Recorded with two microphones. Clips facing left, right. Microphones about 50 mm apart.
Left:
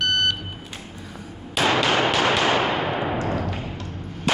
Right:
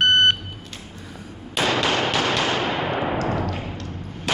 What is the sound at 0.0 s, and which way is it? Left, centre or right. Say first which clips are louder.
Vehicle: right 5 dB; right.